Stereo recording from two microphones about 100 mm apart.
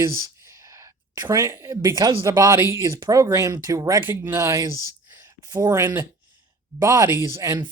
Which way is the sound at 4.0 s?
20° right (ahead or behind).